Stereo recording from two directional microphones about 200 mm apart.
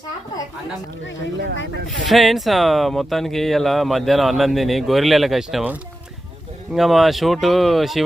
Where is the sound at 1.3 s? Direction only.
65° right (ahead or behind).